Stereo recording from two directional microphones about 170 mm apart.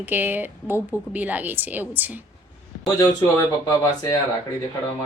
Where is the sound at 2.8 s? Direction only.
15° left (ahead or behind).